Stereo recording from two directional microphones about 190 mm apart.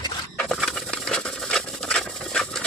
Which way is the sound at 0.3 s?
Centre (ahead or behind).